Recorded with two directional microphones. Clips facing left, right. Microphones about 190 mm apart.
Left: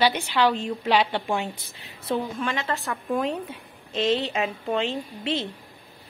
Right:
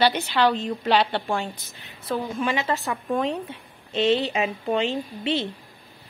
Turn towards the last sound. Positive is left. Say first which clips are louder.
# right 2 dB
turn(degrees=0)  # may be behind; listen again after turning